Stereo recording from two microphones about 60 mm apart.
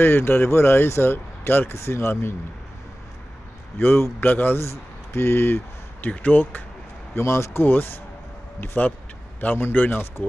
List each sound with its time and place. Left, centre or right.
0.0 s speech: left
3.7 s speech: left
4.6 s speech: left
7.2 s speech: left
7.6 s speech: left